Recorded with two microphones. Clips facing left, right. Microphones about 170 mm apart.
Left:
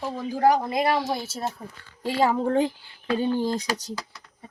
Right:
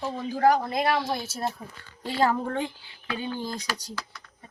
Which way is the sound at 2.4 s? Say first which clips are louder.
Left 7 dB; 30° left (ahead or behind).